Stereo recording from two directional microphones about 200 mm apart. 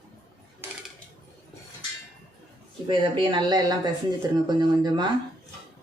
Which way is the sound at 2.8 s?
25° right (ahead or behind).